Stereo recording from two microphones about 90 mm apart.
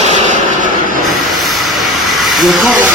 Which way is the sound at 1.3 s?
Centre (ahead or behind).